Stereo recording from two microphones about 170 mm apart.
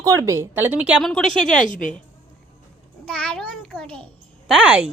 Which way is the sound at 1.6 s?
50° left (ahead or behind).